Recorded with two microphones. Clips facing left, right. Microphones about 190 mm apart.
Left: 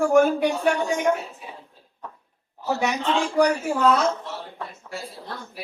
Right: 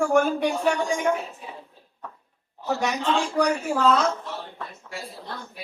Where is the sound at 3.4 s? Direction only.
10° left (ahead or behind).